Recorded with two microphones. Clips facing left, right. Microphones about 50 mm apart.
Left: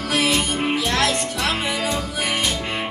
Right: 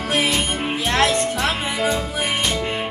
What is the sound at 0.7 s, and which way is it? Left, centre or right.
Music, right.